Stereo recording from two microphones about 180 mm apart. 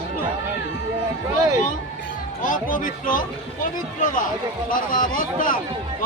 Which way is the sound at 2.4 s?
50° left (ahead or behind).